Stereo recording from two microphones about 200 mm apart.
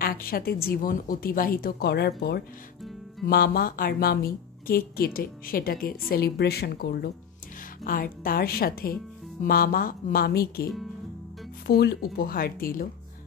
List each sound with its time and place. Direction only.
0.0 s a woman's voice: 45° left (ahead or behind)